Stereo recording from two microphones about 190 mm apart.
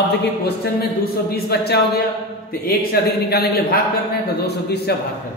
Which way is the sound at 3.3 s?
55° left (ahead or behind).